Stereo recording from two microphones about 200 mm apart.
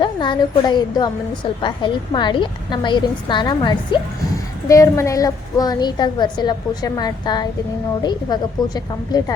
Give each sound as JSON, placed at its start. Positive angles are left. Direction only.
{"t": 0.0, "sound": "a woman's voice", "side_deg": 25}